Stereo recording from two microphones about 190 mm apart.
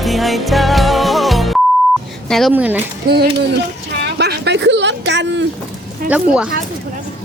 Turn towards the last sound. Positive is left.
turn(degrees=-5)  # may be behind; listen again after turning